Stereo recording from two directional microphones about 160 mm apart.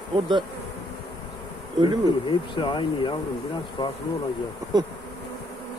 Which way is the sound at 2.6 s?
30° left (ahead or behind).